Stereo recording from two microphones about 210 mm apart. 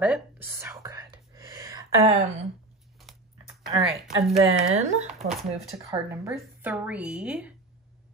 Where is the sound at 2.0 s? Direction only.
30° right (ahead or behind).